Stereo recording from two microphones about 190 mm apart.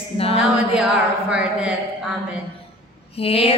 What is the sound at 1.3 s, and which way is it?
Speech, 5° right (ahead or behind).